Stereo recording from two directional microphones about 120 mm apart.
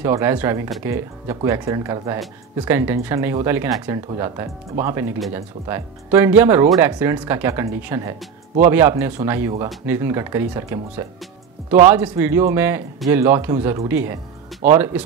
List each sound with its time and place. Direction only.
0.0 s speech: 20° right (ahead or behind)